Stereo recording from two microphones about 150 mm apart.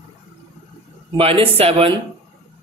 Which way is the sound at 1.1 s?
40° right (ahead or behind).